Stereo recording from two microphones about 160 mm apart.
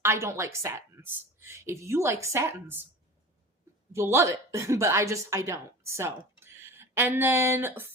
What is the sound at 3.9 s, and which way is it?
A woman's voice, 15° right (ahead or behind).